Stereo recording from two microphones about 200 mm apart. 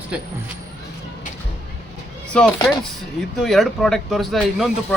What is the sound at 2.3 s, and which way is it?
Speech, 5° left (ahead or behind).